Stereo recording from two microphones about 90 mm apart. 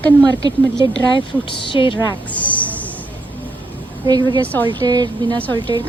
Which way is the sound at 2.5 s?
15° left (ahead or behind).